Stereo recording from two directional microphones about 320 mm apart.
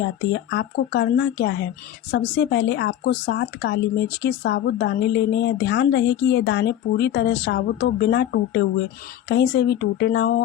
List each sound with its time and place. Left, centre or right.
0.3 s speech: left